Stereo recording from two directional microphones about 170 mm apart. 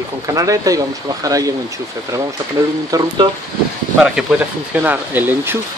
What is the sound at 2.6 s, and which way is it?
Speech, 20° right (ahead or behind).